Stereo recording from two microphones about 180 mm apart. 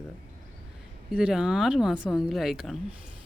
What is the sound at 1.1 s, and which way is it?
Speech, 5° right (ahead or behind).